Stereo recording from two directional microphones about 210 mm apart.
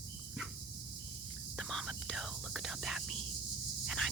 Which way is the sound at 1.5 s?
Centre (ahead or behind).